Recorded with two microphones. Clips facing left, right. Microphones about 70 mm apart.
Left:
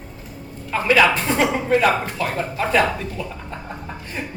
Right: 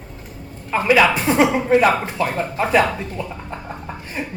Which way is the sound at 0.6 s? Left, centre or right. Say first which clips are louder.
Right 1 dB; centre.